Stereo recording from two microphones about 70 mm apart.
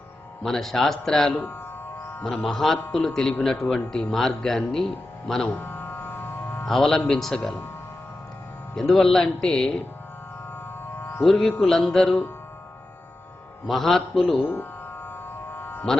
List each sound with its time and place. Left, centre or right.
0.4 s speech: centre
1.3 s speech: left
2.4 s speech: centre
5.5 s music: left
6.7 s speech: centre
8.7 s speech: centre
11.2 s speech: centre
13.7 s speech: centre
14.3 s speech: left
15.5 s music: left